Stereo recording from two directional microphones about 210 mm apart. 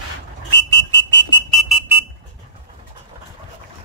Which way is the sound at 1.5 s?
Centre (ahead or behind).